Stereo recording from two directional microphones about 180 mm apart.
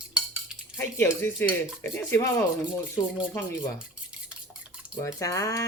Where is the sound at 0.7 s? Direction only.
15° left (ahead or behind).